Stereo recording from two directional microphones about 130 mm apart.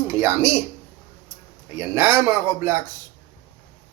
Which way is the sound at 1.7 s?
20° right (ahead or behind).